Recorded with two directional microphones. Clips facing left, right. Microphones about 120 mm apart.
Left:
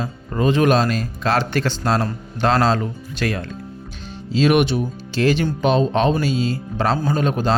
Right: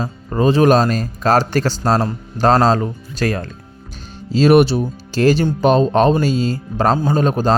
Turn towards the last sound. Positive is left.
turn(degrees=-40)  # may be behind; listen again after turning